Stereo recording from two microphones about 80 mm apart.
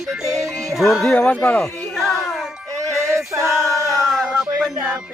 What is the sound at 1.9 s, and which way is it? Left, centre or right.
Music, centre.